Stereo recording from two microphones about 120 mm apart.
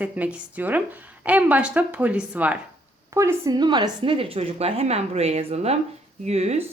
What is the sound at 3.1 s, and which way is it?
Speech, 25° right (ahead or behind).